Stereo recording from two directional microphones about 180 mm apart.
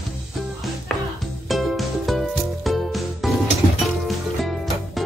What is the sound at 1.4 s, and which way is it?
Music, centre (ahead or behind).